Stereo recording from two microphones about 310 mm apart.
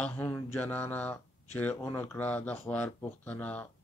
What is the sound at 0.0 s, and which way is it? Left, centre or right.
Speech, centre.